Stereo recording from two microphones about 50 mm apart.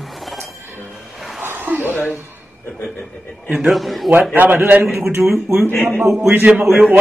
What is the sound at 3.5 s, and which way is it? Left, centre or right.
Mantra, centre.